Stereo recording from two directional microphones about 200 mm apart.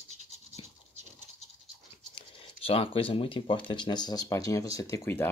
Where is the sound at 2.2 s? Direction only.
30° left (ahead or behind).